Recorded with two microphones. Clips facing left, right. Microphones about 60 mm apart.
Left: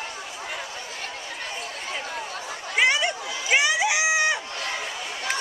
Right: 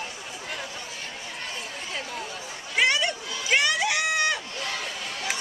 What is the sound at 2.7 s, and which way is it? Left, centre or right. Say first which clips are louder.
Crowd: left 2 dB; centre.